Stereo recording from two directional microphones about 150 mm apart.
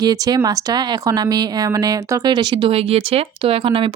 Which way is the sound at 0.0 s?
25° right (ahead or behind).